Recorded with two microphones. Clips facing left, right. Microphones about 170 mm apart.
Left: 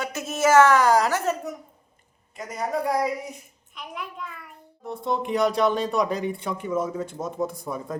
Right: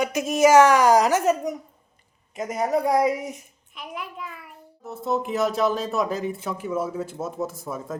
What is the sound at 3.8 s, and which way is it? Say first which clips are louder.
Speech: right 1 dB; centre (ahead or behind).